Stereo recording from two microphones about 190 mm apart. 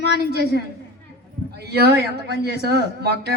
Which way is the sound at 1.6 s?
55° right (ahead or behind).